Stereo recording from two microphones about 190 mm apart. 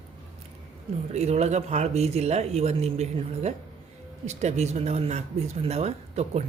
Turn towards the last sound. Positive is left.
turn(degrees=-35)  # may be behind; listen again after turning